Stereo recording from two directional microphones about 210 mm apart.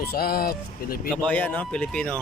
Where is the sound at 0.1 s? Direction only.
45° left (ahead or behind).